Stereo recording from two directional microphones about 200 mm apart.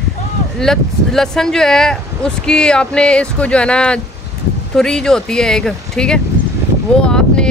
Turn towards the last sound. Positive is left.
turn(degrees=5)  # may be behind; listen again after turning